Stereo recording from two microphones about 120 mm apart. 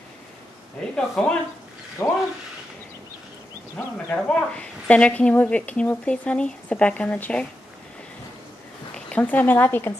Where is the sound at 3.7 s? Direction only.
10° left (ahead or behind).